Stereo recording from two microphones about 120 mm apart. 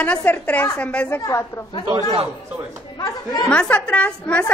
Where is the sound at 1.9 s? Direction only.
50° right (ahead or behind).